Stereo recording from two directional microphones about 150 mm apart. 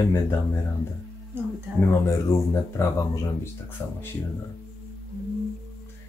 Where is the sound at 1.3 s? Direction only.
15° right (ahead or behind).